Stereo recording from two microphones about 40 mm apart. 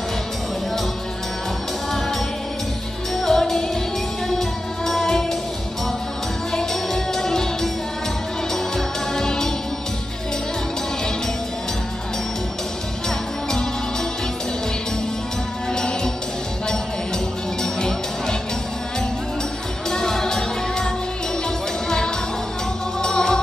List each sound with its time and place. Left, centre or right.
3.2 s music: centre
6.5 s music: centre
8.7 s music: centre
15.7 s music: centre
17.7 s music: centre
19.9 s music: centre